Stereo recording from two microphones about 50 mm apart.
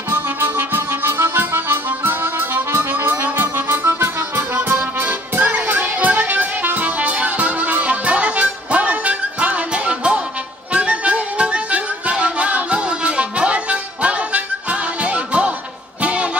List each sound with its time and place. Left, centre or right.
0.1 s music: right
4.7 s music: right